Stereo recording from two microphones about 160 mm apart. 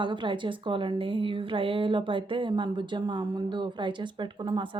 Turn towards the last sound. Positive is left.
turn(degrees=-30)  # may be behind; listen again after turning